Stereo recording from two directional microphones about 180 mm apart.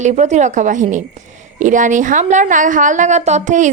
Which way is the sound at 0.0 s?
40° right (ahead or behind).